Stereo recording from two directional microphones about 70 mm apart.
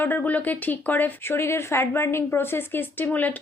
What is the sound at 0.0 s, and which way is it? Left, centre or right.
Speech, left.